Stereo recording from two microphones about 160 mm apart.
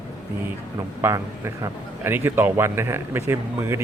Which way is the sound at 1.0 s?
15° right (ahead or behind).